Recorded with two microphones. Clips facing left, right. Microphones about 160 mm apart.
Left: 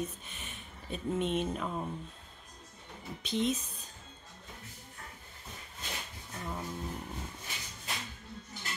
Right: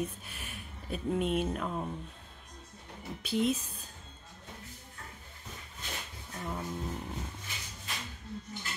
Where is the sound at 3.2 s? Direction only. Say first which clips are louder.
Right 2 dB; 5° right (ahead or behind).